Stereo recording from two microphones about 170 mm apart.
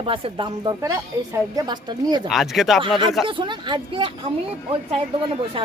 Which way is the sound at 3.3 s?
30° right (ahead or behind).